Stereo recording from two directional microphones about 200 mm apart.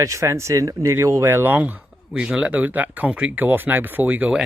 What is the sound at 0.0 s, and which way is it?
Speech, 15° right (ahead or behind).